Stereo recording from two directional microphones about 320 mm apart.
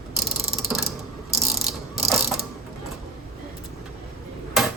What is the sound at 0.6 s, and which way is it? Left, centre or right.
Mechanisms, centre.